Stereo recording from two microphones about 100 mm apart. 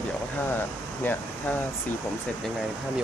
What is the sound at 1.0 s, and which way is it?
Speech, 20° left (ahead or behind).